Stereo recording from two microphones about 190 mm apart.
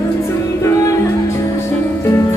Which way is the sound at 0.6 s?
15° left (ahead or behind).